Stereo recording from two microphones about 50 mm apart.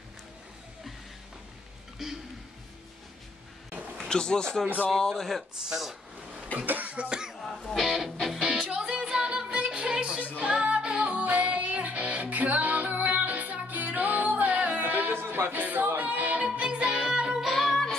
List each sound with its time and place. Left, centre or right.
2.0 s a sound: centre
4.1 s speech: centre
5.7 s a sound: centre
6.6 s cough: right
7.4 s music: centre
8.5 s music: centre; by 15.2 s right
15.2 s music: right
15.5 s music: right
16.4 s music: centre
17.5 s music: centre